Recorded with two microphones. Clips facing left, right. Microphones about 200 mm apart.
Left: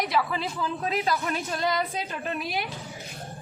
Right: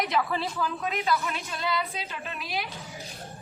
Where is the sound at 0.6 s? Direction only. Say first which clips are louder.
Left 2 dB; 30° left (ahead or behind); by 2.6 s 55° left (ahead or behind).